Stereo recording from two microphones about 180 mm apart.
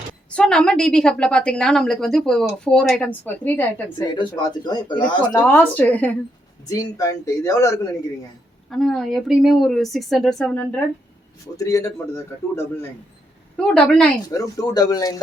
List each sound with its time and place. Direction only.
0.3 s a woman's voice: 5° left (ahead or behind)
3.9 s speech: 25° left (ahead or behind)
5.5 s speech: 5° left (ahead or behind)
8.7 s a woman's voice: centre (ahead or behind)
11.5 s a woman's voice: 20° left (ahead or behind)
14.3 s speech: 20° left (ahead or behind)